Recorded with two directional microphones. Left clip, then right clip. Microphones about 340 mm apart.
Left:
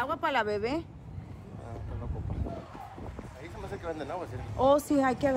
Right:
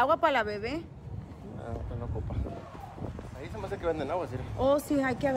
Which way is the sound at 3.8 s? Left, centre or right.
Right.